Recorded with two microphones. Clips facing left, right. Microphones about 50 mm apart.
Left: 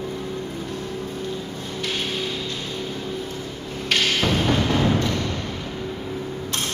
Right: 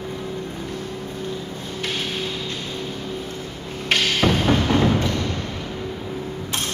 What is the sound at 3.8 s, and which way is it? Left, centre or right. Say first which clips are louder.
Music: right 2 dB; centre.